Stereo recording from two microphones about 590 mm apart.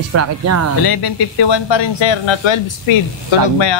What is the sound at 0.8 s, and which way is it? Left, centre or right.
Speech, left.